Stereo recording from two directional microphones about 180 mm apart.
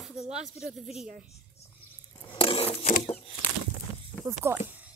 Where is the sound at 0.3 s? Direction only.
5° right (ahead or behind).